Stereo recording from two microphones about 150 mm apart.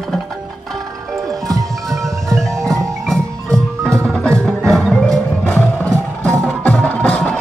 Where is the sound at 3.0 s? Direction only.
5° left (ahead or behind).